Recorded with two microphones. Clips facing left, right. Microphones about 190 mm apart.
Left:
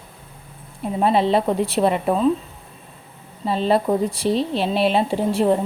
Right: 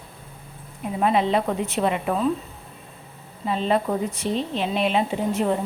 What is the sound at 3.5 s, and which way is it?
Speech, 35° left (ahead or behind).